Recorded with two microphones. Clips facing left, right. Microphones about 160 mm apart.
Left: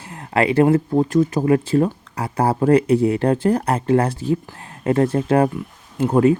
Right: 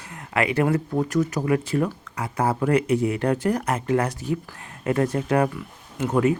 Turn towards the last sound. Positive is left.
turn(degrees=30)  # may be behind; listen again after turning